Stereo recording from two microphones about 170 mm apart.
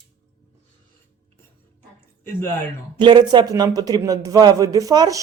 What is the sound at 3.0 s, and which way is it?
A man's voice, 25° right (ahead or behind).